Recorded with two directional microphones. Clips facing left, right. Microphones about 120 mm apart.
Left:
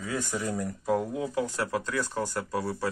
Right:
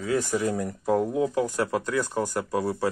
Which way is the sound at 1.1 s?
15° right (ahead or behind).